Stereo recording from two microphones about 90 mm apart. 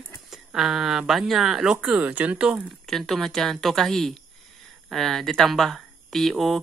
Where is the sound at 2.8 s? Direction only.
5° left (ahead or behind).